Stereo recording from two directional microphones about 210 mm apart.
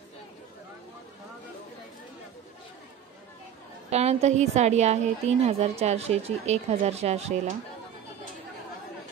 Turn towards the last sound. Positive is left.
turn(degrees=-30)  # may be behind; listen again after turning